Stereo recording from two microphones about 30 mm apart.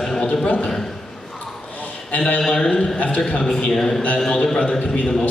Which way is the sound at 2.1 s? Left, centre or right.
Left.